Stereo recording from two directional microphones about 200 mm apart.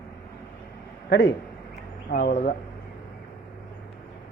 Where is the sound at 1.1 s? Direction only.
55° left (ahead or behind).